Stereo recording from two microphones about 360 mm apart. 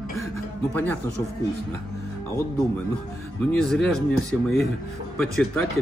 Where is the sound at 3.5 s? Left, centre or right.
Centre.